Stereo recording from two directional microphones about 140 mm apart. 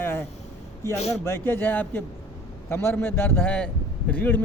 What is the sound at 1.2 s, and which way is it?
A man's voice, 15° left (ahead or behind).